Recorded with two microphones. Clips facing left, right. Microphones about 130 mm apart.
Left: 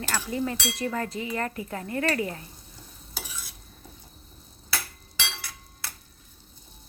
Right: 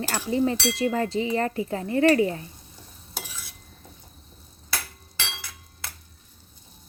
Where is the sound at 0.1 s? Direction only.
25° right (ahead or behind).